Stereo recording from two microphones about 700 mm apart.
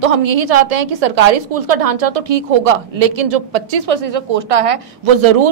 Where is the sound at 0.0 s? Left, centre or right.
Right.